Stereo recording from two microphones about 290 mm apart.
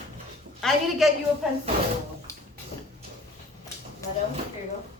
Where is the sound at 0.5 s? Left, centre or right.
Centre.